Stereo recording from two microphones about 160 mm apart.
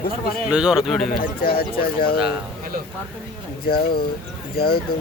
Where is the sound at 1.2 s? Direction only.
70° left (ahead or behind).